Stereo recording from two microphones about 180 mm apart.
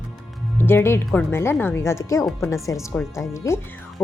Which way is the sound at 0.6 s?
10° left (ahead or behind).